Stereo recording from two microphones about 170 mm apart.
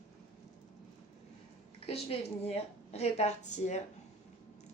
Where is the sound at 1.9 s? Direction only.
35° left (ahead or behind).